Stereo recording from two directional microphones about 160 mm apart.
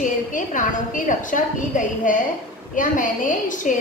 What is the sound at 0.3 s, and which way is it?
A woman's voice, 55° left (ahead or behind).